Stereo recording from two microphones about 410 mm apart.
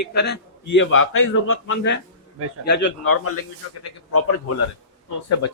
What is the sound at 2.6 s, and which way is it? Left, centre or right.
Speech, left.